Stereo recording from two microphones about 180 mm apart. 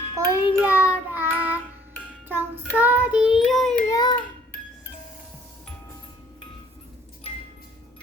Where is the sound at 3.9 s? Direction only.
20° left (ahead or behind).